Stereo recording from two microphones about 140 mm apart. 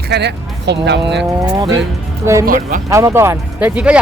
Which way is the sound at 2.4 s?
85° right.